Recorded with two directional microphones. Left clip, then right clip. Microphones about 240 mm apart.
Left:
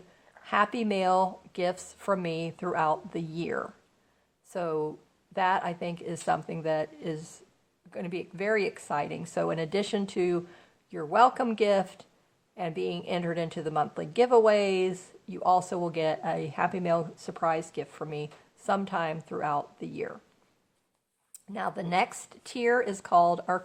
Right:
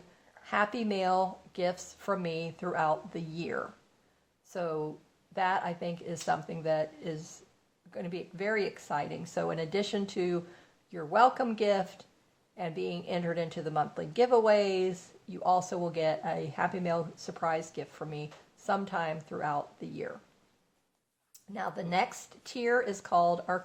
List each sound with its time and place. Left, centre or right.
0.3 s a woman's voice: left
21.5 s speech: left